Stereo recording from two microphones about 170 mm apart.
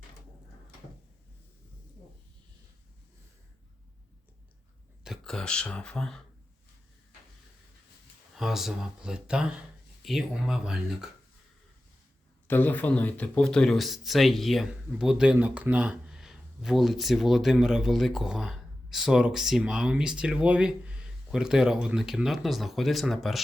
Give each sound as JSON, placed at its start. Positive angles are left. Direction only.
{"t": 5.0, "sound": "speech", "side_deg": 0}
{"t": 8.4, "sound": "speech", "side_deg": 0}
{"t": 12.5, "sound": "speech", "side_deg": 10}